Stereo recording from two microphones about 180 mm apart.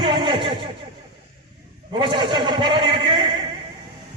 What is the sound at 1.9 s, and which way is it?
A man's voice, 25° right (ahead or behind).